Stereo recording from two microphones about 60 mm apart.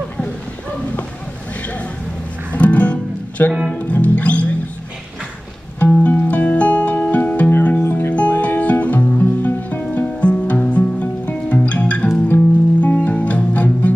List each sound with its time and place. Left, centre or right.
2.5 s music: left
6.0 s music: left